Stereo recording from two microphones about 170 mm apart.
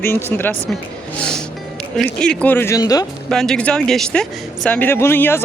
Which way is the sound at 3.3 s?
5° left (ahead or behind).